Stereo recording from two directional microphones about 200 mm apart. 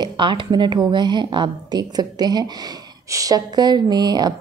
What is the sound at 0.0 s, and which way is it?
A woman's voice, 25° right (ahead or behind).